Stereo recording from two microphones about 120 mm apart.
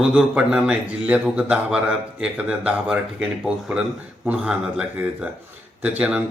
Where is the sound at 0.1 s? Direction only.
10° right (ahead or behind).